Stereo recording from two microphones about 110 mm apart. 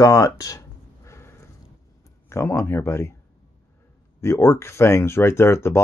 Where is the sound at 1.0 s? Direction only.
25° left (ahead or behind).